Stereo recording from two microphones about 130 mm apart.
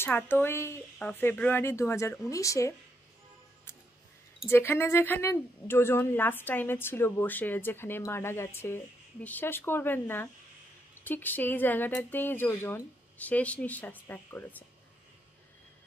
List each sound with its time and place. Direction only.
0.0 s a woman's voice: 15° left (ahead or behind)
4.5 s a woman's voice: 20° left (ahead or behind)